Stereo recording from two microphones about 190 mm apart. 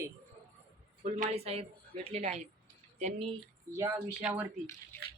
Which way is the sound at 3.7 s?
15° right (ahead or behind).